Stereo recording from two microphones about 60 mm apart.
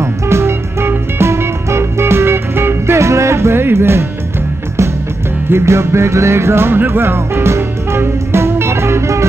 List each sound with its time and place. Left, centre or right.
0.0 s music: right
5.5 s music: right